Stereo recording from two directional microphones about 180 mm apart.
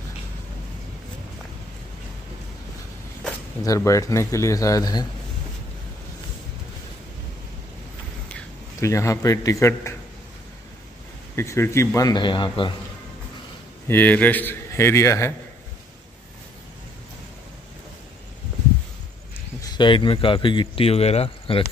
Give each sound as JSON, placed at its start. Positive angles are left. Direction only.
{"t": 3.6, "sound": "a man's voice", "side_deg": 20}
{"t": 8.8, "sound": "a man's voice", "side_deg": 15}
{"t": 11.3, "sound": "a man's voice", "side_deg": 15}
{"t": 13.8, "sound": "a man's voice", "side_deg": 10}
{"t": 19.6, "sound": "speech", "side_deg": 25}